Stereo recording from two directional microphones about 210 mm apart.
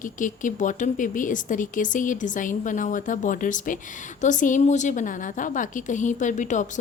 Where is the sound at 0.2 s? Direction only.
40° left (ahead or behind).